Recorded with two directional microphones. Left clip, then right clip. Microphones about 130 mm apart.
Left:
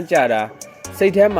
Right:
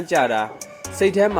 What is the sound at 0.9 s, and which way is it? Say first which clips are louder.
Speech: left 4 dB; 45° left (ahead or behind).